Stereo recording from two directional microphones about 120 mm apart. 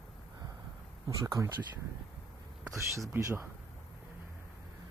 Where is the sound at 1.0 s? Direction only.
30° right (ahead or behind).